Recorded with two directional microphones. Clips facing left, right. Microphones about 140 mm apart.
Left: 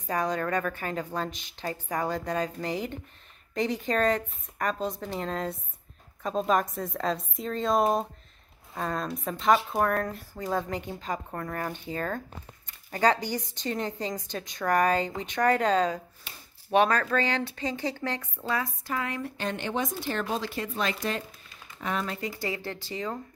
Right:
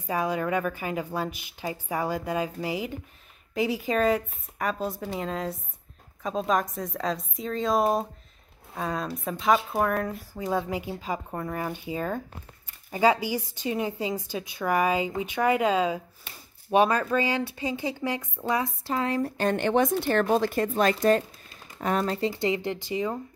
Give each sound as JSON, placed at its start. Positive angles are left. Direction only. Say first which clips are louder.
{"t": 0.0, "sound": "a woman's voice", "louder": "right 1 dB", "side_deg": -10}
{"t": 18.9, "sound": "speech", "louder": "right 5 dB", "side_deg": -30}